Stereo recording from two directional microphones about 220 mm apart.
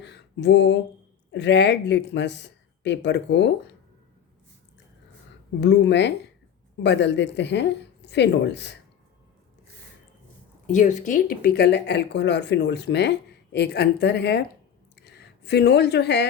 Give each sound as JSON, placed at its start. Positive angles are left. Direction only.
{"t": 0.0, "sound": "a sound", "side_deg": 50}
{"t": 1.3, "sound": "speech", "side_deg": 50}
{"t": 5.5, "sound": "speech", "side_deg": 50}
{"t": 10.7, "sound": "speech", "side_deg": 35}